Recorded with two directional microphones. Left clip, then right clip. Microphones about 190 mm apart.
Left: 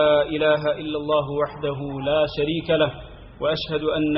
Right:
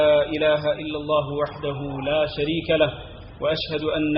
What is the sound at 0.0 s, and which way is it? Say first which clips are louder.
A man's voice: even; 30° left (ahead or behind).